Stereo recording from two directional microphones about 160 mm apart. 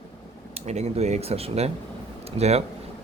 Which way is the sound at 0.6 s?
45° right (ahead or behind).